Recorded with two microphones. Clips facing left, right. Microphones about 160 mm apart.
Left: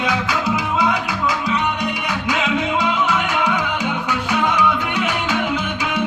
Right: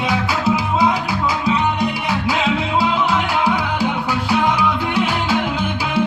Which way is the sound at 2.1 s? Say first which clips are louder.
Right 1 dB; 30° right (ahead or behind).